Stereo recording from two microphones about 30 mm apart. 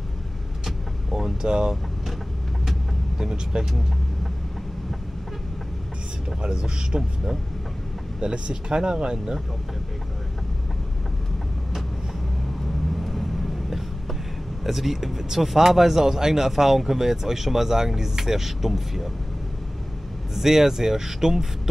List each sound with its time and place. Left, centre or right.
0.7 s vehicle: centre
3.2 s speech: centre
6.4 s speech: right
8.2 s speech: right
12.9 s vehicle: centre
14.6 s speech: centre
20.3 s speech: centre